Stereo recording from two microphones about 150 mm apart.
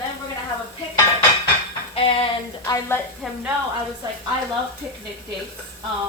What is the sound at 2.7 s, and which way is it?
Speech, 20° left (ahead or behind).